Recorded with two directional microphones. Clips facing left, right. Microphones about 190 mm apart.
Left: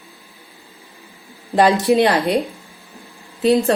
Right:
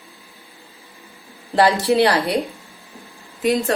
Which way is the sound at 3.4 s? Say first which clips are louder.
Left 4 dB; 35° left (ahead or behind).